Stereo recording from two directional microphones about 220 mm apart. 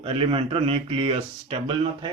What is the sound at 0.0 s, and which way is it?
Speech, 25° right (ahead or behind).